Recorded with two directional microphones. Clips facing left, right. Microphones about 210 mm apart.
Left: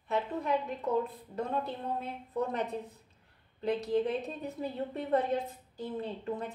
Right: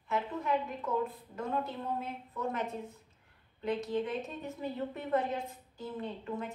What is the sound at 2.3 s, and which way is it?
Speech, 35° left (ahead or behind).